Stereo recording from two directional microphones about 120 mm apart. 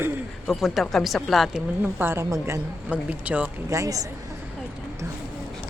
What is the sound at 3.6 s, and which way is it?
Speech, 25° right (ahead or behind).